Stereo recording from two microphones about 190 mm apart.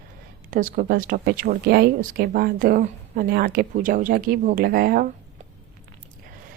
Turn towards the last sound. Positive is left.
turn(degrees=-50)  # may be behind; listen again after turning